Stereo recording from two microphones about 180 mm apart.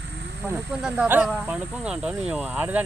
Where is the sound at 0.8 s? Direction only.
5° right (ahead or behind).